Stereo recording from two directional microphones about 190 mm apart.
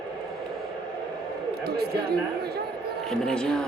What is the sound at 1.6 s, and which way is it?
Speech, 55° right (ahead or behind).